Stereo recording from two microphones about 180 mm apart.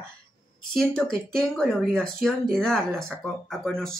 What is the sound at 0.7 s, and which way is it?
Speech, 5° left (ahead or behind).